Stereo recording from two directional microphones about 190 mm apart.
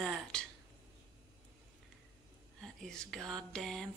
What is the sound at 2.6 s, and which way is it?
Speech, 5° left (ahead or behind).